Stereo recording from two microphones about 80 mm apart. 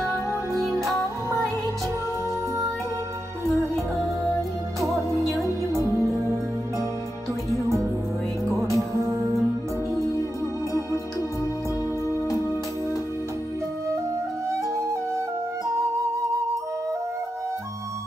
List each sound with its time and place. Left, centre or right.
5.4 s music: right
8.5 s music: right
14.5 s flute: right